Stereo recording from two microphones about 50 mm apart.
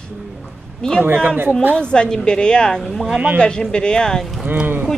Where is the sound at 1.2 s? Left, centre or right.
Right.